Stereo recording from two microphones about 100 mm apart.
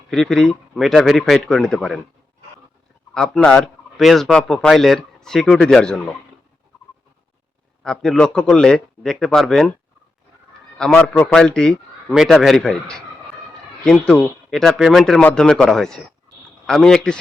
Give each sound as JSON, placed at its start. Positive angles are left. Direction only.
{"t": 0.1, "sound": "speech", "side_deg": 5}
{"t": 3.2, "sound": "speech", "side_deg": 5}
{"t": 7.9, "sound": "speech", "side_deg": 5}
{"t": 10.9, "sound": "a man's voice", "side_deg": 15}